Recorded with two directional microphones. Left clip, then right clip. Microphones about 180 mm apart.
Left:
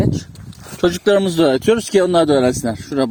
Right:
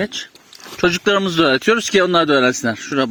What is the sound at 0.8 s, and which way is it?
Speech, 10° left (ahead or behind).